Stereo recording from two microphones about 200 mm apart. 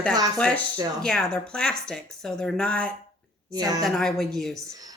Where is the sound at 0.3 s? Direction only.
5° left (ahead or behind).